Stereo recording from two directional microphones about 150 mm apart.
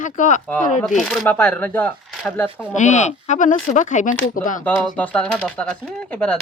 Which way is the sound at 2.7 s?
50° left (ahead or behind).